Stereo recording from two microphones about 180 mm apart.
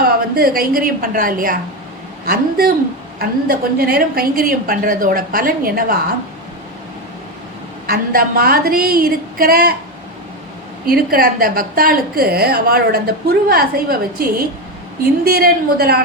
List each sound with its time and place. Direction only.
0.0 s a woman's voice: 55° right (ahead or behind)
7.9 s a woman's voice: 55° right (ahead or behind)
10.8 s a woman's voice: 55° right (ahead or behind)